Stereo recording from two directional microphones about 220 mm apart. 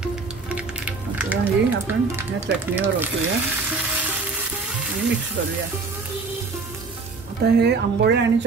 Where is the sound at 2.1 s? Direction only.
10° right (ahead or behind).